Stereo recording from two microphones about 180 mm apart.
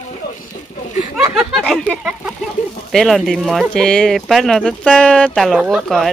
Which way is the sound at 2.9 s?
Centre (ahead or behind).